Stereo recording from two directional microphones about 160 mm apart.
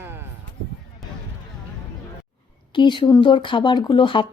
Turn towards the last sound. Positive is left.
turn(degrees=30)  # may be behind; listen again after turning